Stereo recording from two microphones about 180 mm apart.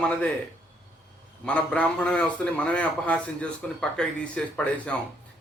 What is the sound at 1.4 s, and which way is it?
A man's voice, 5° left (ahead or behind).